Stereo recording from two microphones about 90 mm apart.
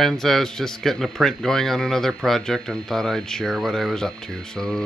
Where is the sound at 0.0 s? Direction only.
5° left (ahead or behind).